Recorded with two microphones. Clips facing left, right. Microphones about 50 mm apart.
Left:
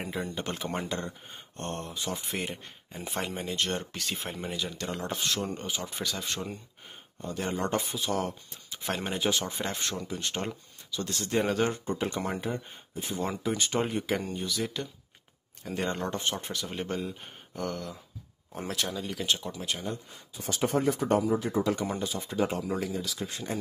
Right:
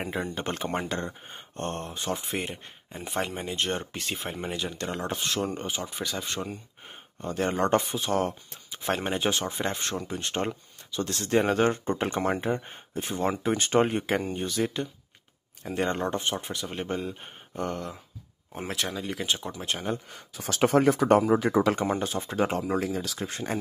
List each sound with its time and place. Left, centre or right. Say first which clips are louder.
0.0 s speech: right 3 dB; right
7.2 s speech: right 5 dB; right
9.5 s speech: right 3 dB; right
19.4 s speech: right 3 dB; right
20.1 s speech: right 2 dB; right
22.0 s speech: right 2 dB; right